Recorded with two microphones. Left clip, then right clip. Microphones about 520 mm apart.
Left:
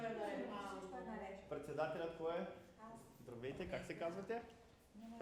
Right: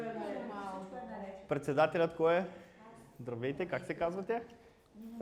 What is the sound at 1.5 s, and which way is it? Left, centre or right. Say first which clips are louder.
Speech: right 13 dB; right.